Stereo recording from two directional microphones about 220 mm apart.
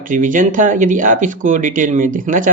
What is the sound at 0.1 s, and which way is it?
Speech, 35° right (ahead or behind).